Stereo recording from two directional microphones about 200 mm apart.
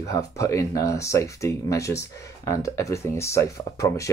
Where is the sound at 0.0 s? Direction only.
15° left (ahead or behind).